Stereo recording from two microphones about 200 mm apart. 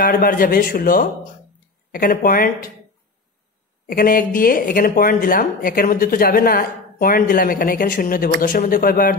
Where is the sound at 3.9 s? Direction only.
45° left (ahead or behind).